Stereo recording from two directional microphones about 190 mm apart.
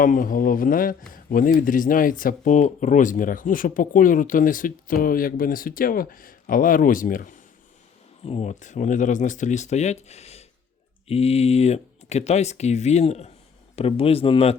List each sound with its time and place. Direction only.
0.0 s speech: 45° left (ahead or behind)
8.2 s speech: 35° left (ahead or behind)